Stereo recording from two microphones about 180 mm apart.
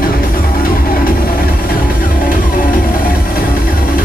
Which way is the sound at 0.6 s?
55° left (ahead or behind).